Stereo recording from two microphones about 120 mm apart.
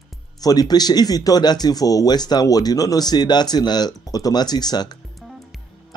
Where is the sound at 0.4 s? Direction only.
35° left (ahead or behind).